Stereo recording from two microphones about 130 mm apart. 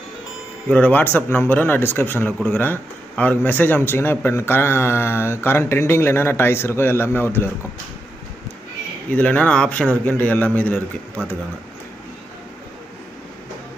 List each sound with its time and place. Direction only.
0.7 s speech: 10° left (ahead or behind)
9.1 s speech: 10° left (ahead or behind)